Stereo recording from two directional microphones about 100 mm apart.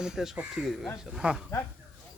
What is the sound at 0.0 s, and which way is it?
Speech, 5° right (ahead or behind).